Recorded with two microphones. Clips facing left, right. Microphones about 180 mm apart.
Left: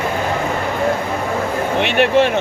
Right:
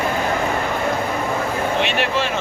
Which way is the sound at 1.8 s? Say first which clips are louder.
Left 7 dB; 60° left (ahead or behind).